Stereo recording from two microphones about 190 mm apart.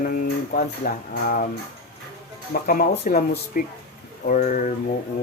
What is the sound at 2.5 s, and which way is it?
Speech, 50° left (ahead or behind).